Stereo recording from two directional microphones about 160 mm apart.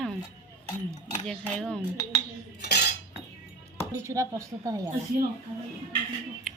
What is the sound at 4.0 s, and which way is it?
Speech, 20° right (ahead or behind).